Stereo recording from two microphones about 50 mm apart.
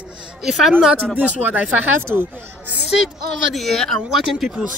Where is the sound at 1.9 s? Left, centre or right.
Right.